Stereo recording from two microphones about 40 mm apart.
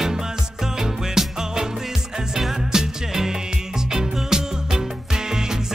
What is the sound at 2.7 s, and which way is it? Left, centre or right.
Music, centre.